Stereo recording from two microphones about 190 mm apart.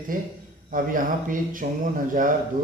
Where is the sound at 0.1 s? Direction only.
45° right (ahead or behind).